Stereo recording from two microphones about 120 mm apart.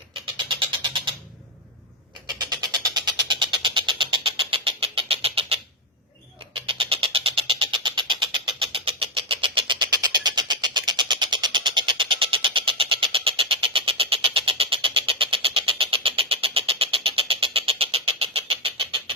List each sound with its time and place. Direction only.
0.3 s vehicle: 45° right (ahead or behind)
2.5 s music: 35° right (ahead or behind); by 5.5 s 55° right (ahead or behind)
6.5 s a sound: 50° right (ahead or behind)